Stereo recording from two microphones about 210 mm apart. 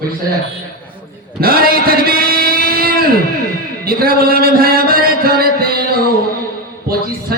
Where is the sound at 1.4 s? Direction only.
45° right (ahead or behind).